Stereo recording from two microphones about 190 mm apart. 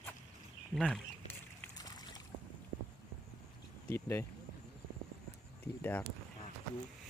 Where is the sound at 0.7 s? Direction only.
Centre (ahead or behind).